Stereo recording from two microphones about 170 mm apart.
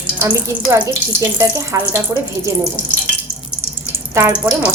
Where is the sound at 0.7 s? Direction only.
15° right (ahead or behind).